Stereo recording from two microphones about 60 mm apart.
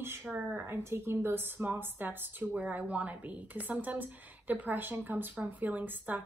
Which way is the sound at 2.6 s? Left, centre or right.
Right.